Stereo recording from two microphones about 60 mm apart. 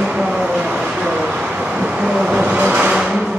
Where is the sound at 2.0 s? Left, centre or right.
Centre.